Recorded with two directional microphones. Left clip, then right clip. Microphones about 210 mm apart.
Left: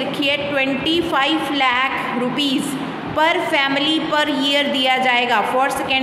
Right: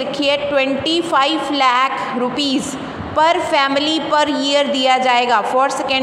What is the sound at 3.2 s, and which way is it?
A woman's voice, 25° right (ahead or behind).